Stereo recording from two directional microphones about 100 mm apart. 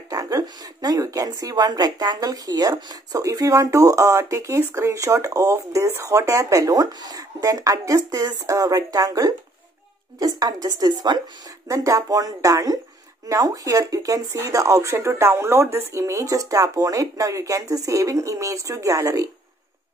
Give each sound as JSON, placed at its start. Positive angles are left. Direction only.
{"t": 0.1, "sound": "a woman's voice", "side_deg": -40}
{"t": 11.6, "sound": "a woman's voice", "side_deg": -35}